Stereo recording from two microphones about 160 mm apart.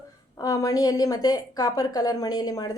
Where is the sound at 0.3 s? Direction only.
20° left (ahead or behind).